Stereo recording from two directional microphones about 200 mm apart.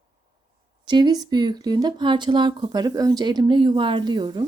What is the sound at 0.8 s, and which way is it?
Speech, 20° right (ahead or behind).